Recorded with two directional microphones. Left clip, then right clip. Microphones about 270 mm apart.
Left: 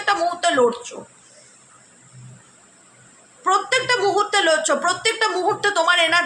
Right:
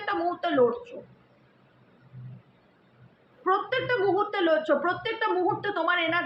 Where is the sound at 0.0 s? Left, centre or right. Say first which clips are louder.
Left 9 dB; left.